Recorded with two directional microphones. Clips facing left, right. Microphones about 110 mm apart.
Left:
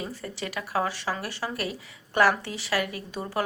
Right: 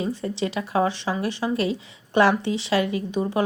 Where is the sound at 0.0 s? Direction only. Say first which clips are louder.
Right 8 dB; 25° right (ahead or behind).